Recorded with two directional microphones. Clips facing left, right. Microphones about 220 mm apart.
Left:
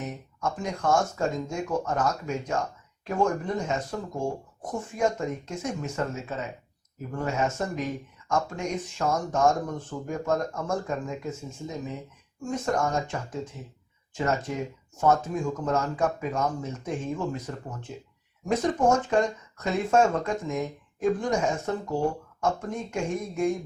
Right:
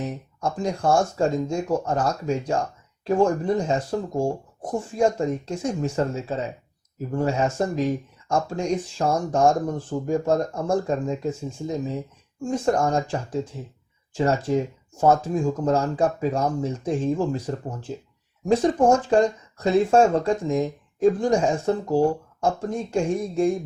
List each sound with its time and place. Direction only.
0.0 s speech: 30° right (ahead or behind)